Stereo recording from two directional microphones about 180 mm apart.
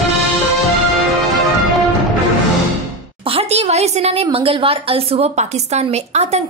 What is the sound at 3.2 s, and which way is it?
A woman's voice, 35° right (ahead or behind).